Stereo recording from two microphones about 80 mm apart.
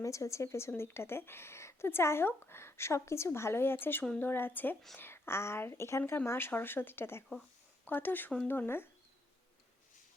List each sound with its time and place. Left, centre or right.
0.0 s speech: left